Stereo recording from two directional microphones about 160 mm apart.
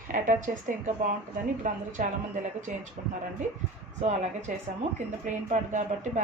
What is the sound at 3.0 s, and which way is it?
Speech, 45° right (ahead or behind).